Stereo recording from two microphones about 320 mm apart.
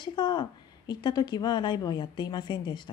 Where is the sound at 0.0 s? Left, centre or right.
Centre.